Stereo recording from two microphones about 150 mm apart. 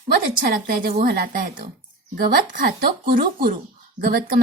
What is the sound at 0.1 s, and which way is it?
Speech, 70° right (ahead or behind).